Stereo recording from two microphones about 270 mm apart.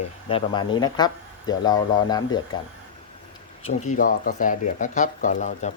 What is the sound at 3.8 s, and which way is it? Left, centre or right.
Speech, left.